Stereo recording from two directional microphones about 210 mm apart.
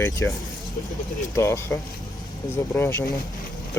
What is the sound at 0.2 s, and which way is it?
Speech, 10° left (ahead or behind).